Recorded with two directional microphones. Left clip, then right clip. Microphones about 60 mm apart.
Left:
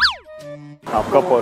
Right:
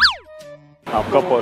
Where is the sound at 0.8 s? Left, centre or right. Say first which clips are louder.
Left 1 dB; centre.